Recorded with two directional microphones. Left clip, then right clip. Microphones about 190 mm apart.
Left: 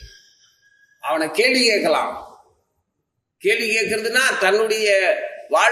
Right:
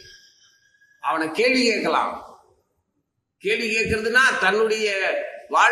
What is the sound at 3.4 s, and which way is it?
A man's voice, 50° left (ahead or behind).